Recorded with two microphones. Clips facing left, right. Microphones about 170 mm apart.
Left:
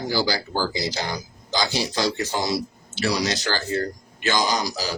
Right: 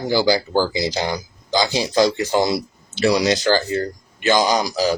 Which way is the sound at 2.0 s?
55° right (ahead or behind).